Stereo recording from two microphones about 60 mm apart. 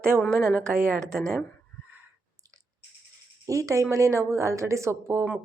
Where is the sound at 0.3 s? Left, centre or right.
Right.